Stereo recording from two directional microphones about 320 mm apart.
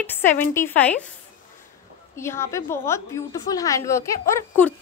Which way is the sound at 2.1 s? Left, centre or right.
Centre.